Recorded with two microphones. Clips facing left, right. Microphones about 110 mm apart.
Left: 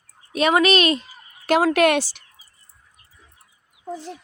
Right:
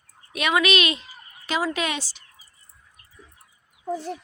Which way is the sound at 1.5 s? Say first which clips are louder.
Left 9 dB; 65° left (ahead or behind).